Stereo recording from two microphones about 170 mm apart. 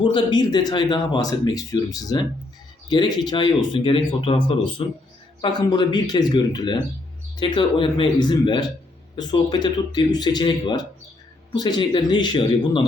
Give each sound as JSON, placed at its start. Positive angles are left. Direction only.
{"t": 0.0, "sound": "speech", "side_deg": 30}